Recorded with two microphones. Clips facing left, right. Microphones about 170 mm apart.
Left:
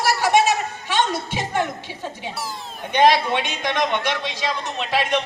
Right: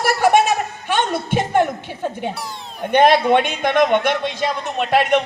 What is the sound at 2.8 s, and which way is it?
A man's voice, 55° right (ahead or behind).